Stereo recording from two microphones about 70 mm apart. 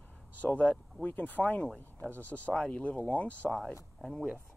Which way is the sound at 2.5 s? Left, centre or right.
Centre.